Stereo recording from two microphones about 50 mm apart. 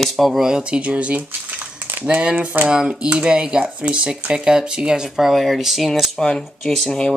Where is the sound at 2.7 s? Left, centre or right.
Right; by 5.9 s centre.